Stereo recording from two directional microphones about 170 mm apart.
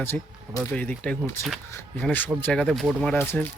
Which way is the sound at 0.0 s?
15° left (ahead or behind).